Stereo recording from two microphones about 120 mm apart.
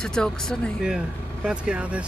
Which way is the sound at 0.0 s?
5° left (ahead or behind).